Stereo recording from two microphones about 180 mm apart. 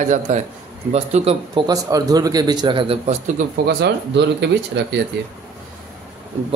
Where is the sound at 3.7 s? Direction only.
65° right (ahead or behind).